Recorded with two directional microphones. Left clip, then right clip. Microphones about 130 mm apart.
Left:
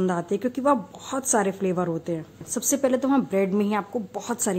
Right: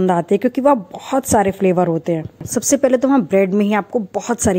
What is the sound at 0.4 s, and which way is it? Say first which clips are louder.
A woman's voice: right 8 dB; 30° right (ahead or behind).